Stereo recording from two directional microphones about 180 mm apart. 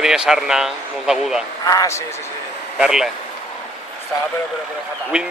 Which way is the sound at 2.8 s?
5° right (ahead or behind).